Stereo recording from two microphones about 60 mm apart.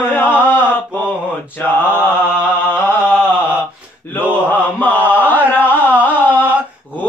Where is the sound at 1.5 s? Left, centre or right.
Left.